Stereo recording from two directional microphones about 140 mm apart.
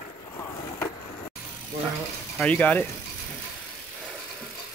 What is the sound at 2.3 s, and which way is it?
Speech, 10° left (ahead or behind).